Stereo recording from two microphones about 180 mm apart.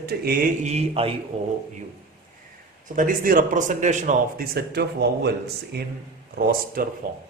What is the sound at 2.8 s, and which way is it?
Speech, 45° right (ahead or behind).